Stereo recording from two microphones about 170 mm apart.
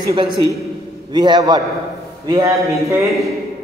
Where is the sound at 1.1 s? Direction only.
25° right (ahead or behind).